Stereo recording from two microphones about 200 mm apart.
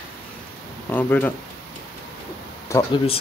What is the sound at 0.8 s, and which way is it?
Speech, 10° left (ahead or behind).